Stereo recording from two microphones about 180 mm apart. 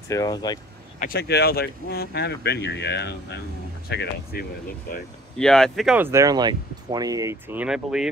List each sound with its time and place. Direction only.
0.1 s speech: 20° left (ahead or behind)
0.9 s speech: 55° left (ahead or behind)
5.4 s speech: 5° left (ahead or behind)
5.9 s speech: 15° right (ahead or behind)